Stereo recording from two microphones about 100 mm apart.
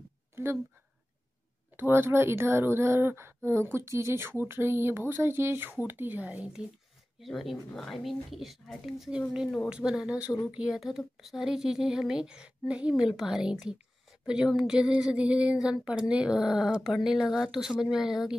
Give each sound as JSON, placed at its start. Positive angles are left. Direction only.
{"t": 1.8, "sound": "a woman's voice", "side_deg": -25}
{"t": 7.2, "sound": "speech", "side_deg": 0}